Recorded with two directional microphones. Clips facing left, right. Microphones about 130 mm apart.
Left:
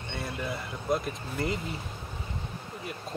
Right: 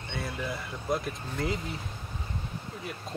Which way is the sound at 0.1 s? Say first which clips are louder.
Even; centre (ahead or behind).